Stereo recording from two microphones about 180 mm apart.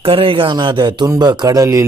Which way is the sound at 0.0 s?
30° right (ahead or behind).